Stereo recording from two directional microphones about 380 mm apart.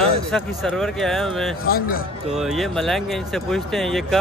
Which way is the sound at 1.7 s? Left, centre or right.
Left.